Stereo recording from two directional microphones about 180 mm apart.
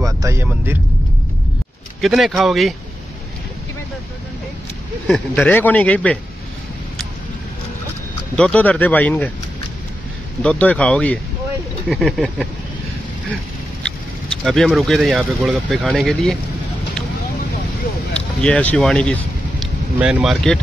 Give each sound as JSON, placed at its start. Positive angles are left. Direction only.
{"t": 0.0, "sound": "vehicle", "side_deg": -15}
{"t": 2.0, "sound": "speech", "side_deg": 0}
{"t": 5.0, "sound": "speech", "side_deg": 10}
{"t": 8.4, "sound": "speech", "side_deg": 5}
{"t": 10.4, "sound": "speech", "side_deg": 5}
{"t": 14.4, "sound": "speech", "side_deg": 0}
{"t": 18.4, "sound": "speech", "side_deg": 5}